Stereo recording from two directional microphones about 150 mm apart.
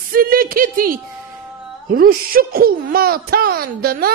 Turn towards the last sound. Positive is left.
turn(degrees=-90)